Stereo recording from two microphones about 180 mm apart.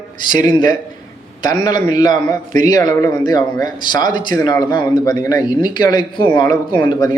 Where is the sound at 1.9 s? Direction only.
20° left (ahead or behind).